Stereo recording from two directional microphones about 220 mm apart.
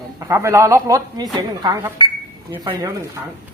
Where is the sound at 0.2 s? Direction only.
15° right (ahead or behind).